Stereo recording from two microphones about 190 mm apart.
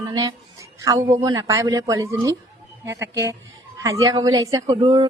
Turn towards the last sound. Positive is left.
turn(degrees=-20)  # may be behind; listen again after turning